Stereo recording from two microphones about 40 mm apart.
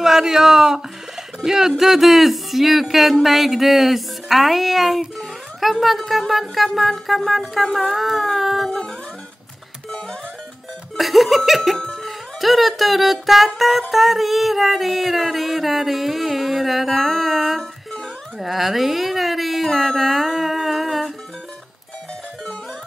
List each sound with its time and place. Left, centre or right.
0.0 s speech: centre
1.7 s music: centre
8.6 s music: centre
11.0 s music: centre
11.9 s speech: centre
13.6 s music: centre
18.4 s a sound: centre